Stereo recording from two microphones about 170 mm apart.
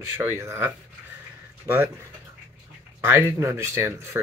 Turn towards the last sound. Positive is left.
turn(degrees=-15)  # may be behind; listen again after turning